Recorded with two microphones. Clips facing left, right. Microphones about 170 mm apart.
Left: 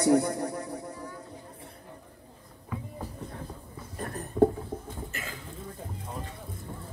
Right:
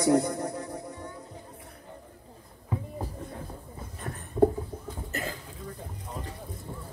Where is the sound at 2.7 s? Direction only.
30° right (ahead or behind).